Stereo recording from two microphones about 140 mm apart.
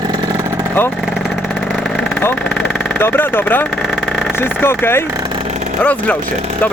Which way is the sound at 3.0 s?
15° left (ahead or behind).